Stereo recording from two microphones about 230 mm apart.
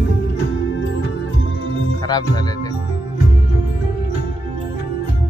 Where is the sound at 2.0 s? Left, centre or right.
Centre.